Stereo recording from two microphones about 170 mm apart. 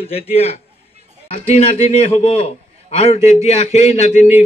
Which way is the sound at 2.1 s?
40° left (ahead or behind).